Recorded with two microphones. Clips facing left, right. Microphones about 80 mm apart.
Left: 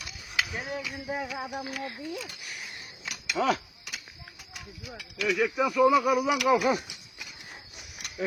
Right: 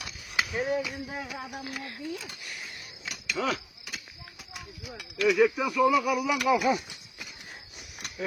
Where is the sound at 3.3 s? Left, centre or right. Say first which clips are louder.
Left 4 dB; left.